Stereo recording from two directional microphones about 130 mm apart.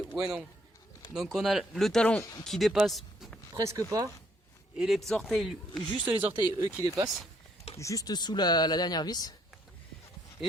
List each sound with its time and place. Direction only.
0.1 s speech: 35° right (ahead or behind)
1.1 s speech: centre (ahead or behind)
3.5 s speech: 25° right (ahead or behind)
4.8 s speech: centre (ahead or behind)
6.1 s speech: 40° right (ahead or behind)
6.8 s speech: 30° right (ahead or behind)
7.8 s speech: 25° left (ahead or behind)